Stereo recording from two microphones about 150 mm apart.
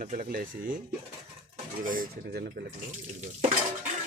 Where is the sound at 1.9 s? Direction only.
80° right.